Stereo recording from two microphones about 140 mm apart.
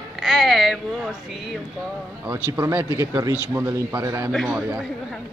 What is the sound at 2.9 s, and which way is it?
Speech, 20° right (ahead or behind).